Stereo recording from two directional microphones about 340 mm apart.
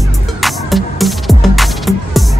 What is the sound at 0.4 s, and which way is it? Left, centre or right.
Music, centre.